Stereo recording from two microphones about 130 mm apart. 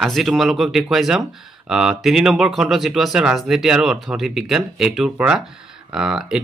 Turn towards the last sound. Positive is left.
turn(degrees=-5)  # may be behind; listen again after turning